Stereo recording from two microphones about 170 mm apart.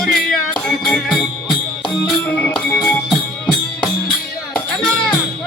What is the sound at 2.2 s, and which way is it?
Music, 10° left (ahead or behind).